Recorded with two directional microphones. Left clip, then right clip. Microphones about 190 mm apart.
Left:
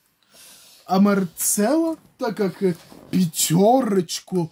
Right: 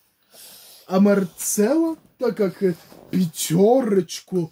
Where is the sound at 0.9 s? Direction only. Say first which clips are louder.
Right 1 dB; 50° left (ahead or behind).